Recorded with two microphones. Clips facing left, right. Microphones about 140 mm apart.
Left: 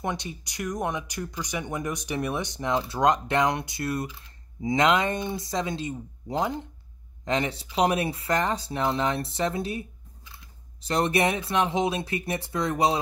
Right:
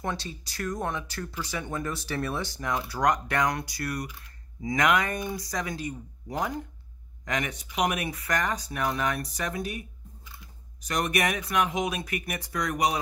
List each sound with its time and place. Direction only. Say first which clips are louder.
0.0 s speech: left 2 dB; 20° left (ahead or behind)